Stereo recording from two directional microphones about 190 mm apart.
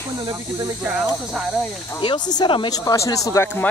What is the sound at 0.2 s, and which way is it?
Speech, 20° right (ahead or behind).